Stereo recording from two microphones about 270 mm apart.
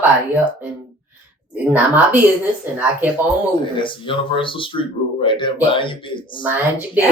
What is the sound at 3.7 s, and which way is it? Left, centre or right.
Speech, centre.